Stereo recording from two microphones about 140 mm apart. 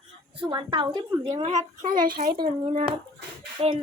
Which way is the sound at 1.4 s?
60° right (ahead or behind).